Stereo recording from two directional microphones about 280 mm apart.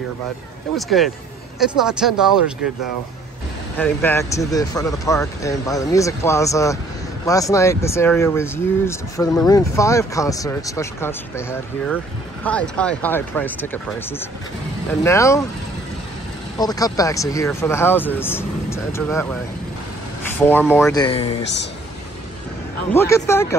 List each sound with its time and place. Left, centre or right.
0.7 s speech: centre
3.7 s speech: centre
16.5 s speech: centre
20.7 s speech: centre
22.9 s speech: centre